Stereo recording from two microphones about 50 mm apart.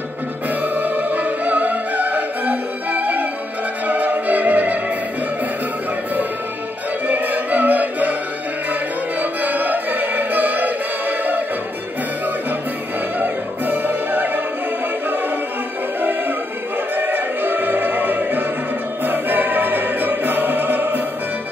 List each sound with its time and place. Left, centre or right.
0.7 s music: right
7.1 s music: right
9.2 s music: right
13.2 s music: right
16.0 s music: right